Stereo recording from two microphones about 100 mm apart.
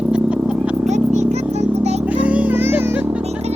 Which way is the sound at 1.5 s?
90° right.